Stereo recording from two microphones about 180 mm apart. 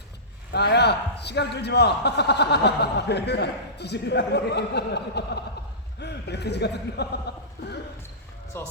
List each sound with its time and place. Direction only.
0.5 s a man's voice: 65° left (ahead or behind)
8.5 s speech: 15° left (ahead or behind)